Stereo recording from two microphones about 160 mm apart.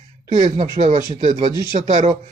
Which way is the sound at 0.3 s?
45° right (ahead or behind).